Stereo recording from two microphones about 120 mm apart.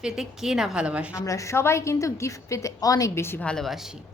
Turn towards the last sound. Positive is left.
turn(degrees=0)  # may be behind; listen again after turning